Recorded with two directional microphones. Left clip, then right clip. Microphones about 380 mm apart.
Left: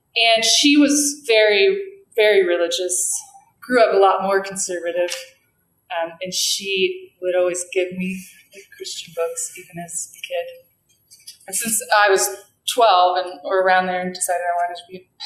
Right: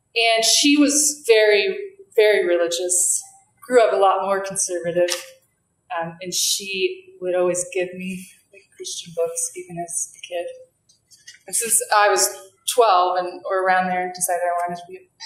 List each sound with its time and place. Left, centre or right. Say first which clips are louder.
0.1 s a woman's voice: left 2 dB; centre
10.2 s a woman's voice: left 4 dB; centre
11.4 s a woman's voice: even; right